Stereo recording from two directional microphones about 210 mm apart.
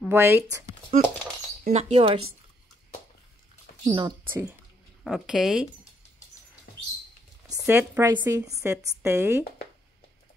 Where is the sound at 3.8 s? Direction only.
20° right (ahead or behind).